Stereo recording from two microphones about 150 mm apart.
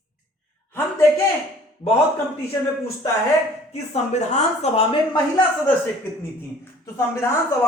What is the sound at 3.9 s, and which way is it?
A woman's voice, 50° left (ahead or behind).